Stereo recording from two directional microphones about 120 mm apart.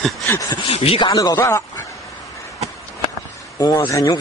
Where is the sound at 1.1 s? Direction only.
30° left (ahead or behind).